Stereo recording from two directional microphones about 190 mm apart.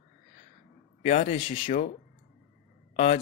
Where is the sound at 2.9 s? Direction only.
35° left (ahead or behind).